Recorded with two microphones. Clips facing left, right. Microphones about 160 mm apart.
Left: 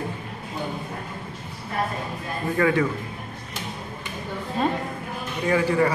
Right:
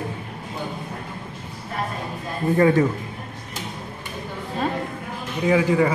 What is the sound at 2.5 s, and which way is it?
Speech, 30° right (ahead or behind).